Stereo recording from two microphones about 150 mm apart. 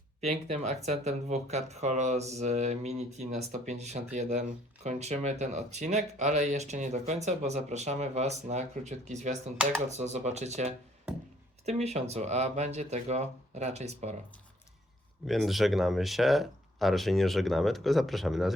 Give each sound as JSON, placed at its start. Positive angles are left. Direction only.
{"t": 0.2, "sound": "speech", "side_deg": -45}
{"t": 15.3, "sound": "speech", "side_deg": 0}